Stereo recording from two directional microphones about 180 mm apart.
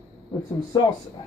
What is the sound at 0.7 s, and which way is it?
Speech, 20° left (ahead or behind).